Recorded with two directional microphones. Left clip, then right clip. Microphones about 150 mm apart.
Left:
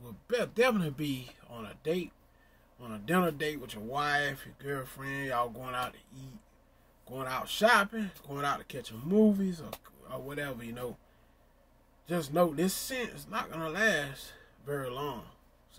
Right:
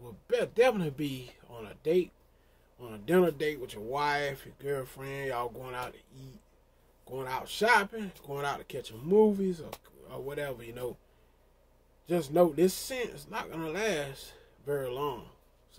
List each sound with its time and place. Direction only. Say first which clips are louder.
0.0 s a man's voice: right 2 dB; centre (ahead or behind)
12.1 s speech: right 3 dB; 10° right (ahead or behind)